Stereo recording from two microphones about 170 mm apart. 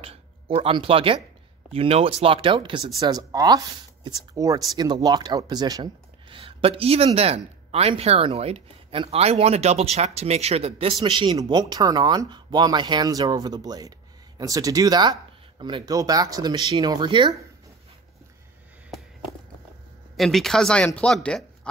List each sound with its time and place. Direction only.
0.0 s speech: 35° right (ahead or behind)
20.2 s speech: centre (ahead or behind)